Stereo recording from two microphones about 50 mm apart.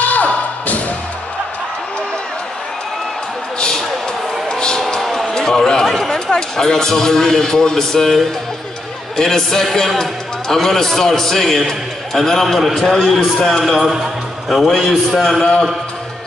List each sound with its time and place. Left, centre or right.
0.0 s music: left
3.5 s a sound: centre
5.3 s a man's voice: centre
15.4 s a man's voice: centre